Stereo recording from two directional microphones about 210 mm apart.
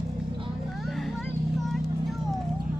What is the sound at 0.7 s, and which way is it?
Vehicle, centre (ahead or behind).